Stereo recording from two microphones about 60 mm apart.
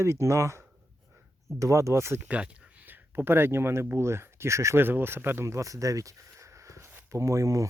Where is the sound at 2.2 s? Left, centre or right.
Right.